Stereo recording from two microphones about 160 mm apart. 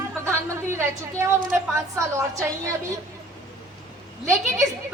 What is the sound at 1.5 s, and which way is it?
A woman's voice, 15° right (ahead or behind).